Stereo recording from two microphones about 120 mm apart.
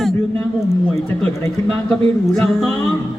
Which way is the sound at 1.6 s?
5° left (ahead or behind).